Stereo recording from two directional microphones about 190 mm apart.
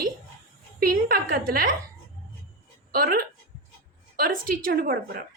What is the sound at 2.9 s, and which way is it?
A woman's voice, 50° right (ahead or behind).